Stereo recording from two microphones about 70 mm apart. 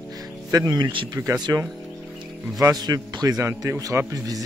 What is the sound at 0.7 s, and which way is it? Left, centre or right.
Speech, right.